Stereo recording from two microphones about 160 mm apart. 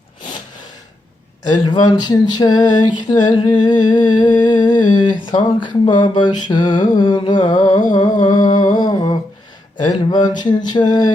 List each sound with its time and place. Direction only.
1.5 s speech: 25° left (ahead or behind)
8.2 s humming: 25° left (ahead or behind)
9.7 s speech: 25° left (ahead or behind)